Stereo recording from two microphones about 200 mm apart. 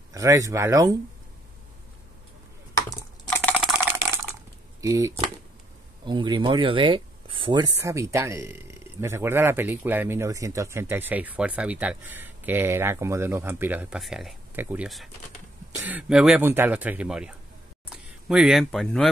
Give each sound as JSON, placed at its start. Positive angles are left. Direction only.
{"t": 0.1, "sound": "speech", "side_deg": -15}
{"t": 2.7, "sound": "computer keyboard", "side_deg": 15}
{"t": 4.8, "sound": "speech", "side_deg": -15}